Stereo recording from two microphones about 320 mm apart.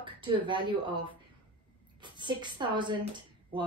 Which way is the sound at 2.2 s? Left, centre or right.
Centre.